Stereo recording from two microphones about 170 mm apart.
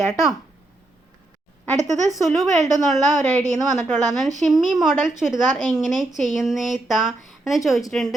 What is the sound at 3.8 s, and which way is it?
Speech, 45° right (ahead or behind).